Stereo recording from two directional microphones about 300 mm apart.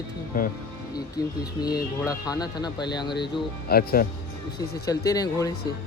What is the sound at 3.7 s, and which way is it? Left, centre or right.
Speech, left.